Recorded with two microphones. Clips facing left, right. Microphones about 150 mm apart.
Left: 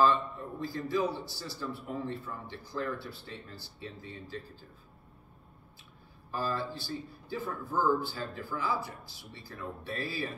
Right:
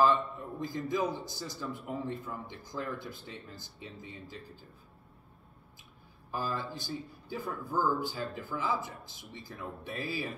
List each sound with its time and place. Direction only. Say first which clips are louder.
0.0 s a man's voice: even; 15° right (ahead or behind)
6.3 s a man's voice: left 2 dB; 15° right (ahead or behind)